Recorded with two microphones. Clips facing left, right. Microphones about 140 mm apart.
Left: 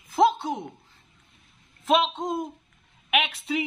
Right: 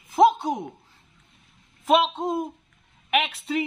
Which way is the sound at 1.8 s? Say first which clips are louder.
Right 2 dB; 10° right (ahead or behind).